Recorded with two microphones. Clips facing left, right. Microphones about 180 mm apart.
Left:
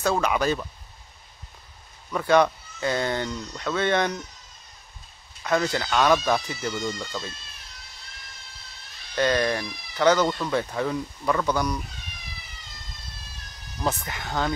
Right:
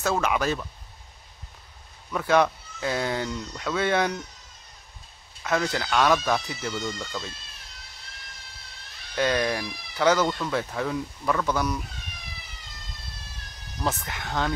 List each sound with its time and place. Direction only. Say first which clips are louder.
0.0 s speech: left 2 dB; centre (ahead or behind)
2.1 s speech: left 2 dB; centre (ahead or behind)
5.4 s speech: left 2 dB; centre (ahead or behind)
9.1 s speech: left 2 dB; 5° right (ahead or behind)
13.8 s speech: left 1 dB; centre (ahead or behind)